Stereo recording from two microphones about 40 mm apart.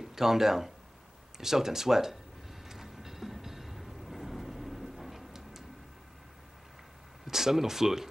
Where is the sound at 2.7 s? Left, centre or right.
Centre.